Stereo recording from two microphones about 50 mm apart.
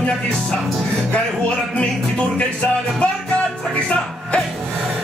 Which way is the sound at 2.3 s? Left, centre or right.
Left.